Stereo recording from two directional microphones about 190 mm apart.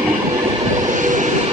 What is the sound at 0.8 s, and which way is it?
Train, 40° right (ahead or behind).